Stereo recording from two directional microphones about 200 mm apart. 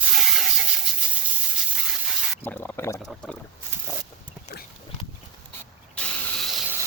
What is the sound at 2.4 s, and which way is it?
Speech, 10° left (ahead or behind).